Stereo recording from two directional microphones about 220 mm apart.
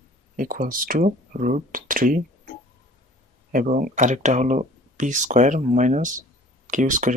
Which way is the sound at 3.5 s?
40° right (ahead or behind).